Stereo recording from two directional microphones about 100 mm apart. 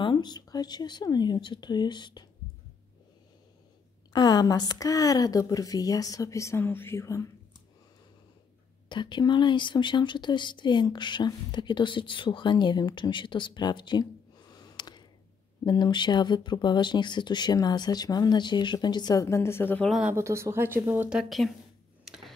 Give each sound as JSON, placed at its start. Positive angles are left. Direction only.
{"t": 0.0, "sound": "speech", "side_deg": 45}
{"t": 4.1, "sound": "a woman's voice", "side_deg": 45}
{"t": 8.8, "sound": "speech", "side_deg": 50}
{"t": 19.2, "sound": "a woman's voice", "side_deg": 25}
{"t": 20.2, "sound": "speech", "side_deg": -30}
{"t": 21.1, "sound": "speech", "side_deg": -5}
{"t": 22.0, "sound": "a sound", "side_deg": -5}